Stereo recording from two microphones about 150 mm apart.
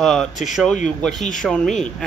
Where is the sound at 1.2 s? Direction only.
60° left (ahead or behind).